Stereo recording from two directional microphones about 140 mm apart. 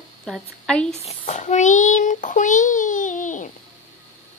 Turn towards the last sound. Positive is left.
turn(degrees=65)  # may be behind; listen again after turning